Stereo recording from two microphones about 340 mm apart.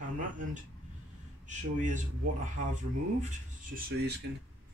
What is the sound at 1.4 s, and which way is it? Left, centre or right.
Speech, right.